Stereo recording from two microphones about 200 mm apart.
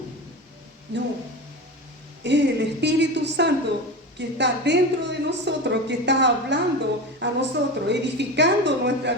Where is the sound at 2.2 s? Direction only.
60° right (ahead or behind).